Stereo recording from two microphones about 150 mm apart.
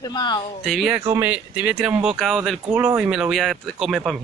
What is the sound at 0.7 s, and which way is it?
Speech, centre (ahead or behind).